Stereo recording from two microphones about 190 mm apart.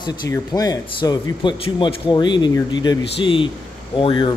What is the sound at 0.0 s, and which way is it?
Speech, 20° left (ahead or behind).